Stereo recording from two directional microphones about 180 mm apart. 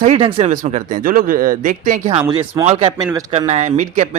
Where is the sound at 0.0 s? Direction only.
35° right (ahead or behind).